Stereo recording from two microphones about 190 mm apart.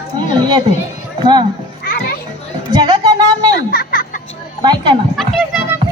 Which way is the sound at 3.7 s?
50° left (ahead or behind).